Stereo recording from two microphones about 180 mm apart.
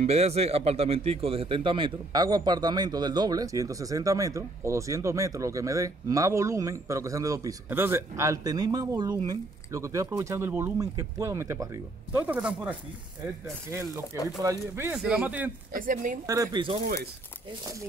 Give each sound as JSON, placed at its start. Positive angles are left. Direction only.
{"t": 0.0, "sound": "speech", "side_deg": -35}
{"t": 14.4, "sound": "speech", "side_deg": -15}
{"t": 15.7, "sound": "speech", "side_deg": -45}
{"t": 16.3, "sound": "speech", "side_deg": -20}
{"t": 16.8, "sound": "speech", "side_deg": -60}